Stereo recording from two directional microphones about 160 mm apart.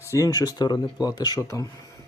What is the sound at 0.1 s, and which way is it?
Speech, 20° left (ahead or behind).